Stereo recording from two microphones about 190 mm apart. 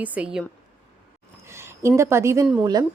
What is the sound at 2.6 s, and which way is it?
Speech, 20° right (ahead or behind).